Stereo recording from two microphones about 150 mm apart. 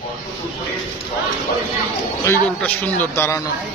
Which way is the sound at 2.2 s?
10° left (ahead or behind).